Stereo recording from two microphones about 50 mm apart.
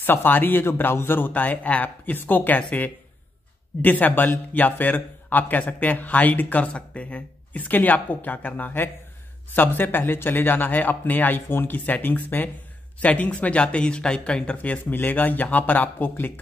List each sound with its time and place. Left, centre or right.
0.0 s a man's voice: left
13.0 s speech: left